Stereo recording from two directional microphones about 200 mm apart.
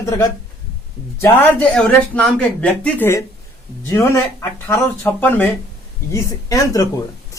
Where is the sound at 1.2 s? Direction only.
5° left (ahead or behind).